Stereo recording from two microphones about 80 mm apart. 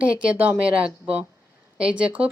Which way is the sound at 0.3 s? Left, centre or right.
Centre.